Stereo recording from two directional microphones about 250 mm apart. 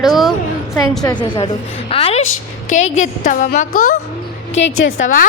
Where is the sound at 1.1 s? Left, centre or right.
Centre.